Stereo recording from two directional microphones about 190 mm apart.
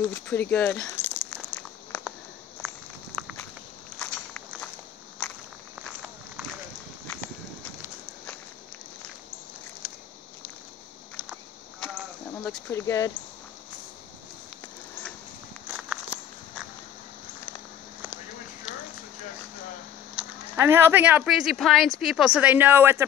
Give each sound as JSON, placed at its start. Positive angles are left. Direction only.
{"t": 0.1, "sound": "a sound", "side_deg": 10}
{"t": 3.1, "sound": "walk", "side_deg": -15}
{"t": 4.0, "sound": "walk", "side_deg": 10}
{"t": 12.6, "sound": "speech", "side_deg": 15}
{"t": 15.7, "sound": "walk", "side_deg": -5}
{"t": 20.2, "sound": "speech", "side_deg": -15}